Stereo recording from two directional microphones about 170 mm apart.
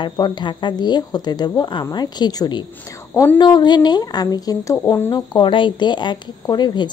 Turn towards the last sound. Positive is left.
turn(degrees=25)  # may be behind; listen again after turning